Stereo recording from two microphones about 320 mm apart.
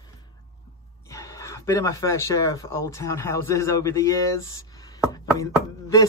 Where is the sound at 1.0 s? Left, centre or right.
Centre.